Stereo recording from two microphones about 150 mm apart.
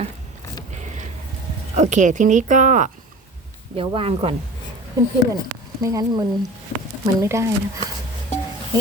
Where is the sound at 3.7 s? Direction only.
35° right (ahead or behind).